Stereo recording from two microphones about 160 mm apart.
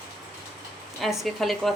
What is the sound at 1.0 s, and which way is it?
Speech, centre (ahead or behind).